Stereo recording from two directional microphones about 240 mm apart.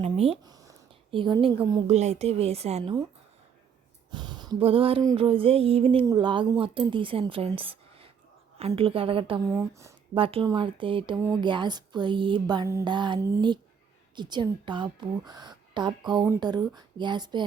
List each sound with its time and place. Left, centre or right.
0.0 s a woman's voice: right
4.1 s a woman's voice: centre